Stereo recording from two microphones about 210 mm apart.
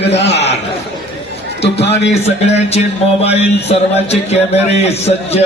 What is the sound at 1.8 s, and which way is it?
Speech, 55° left (ahead or behind).